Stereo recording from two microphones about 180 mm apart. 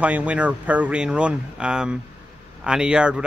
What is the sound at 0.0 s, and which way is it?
A man's voice, 10° right (ahead or behind).